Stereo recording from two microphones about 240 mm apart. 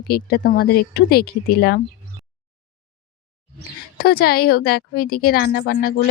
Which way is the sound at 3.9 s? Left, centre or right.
Left.